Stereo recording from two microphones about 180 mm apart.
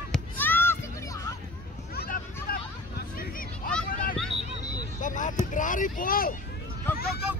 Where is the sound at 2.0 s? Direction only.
60° left (ahead or behind).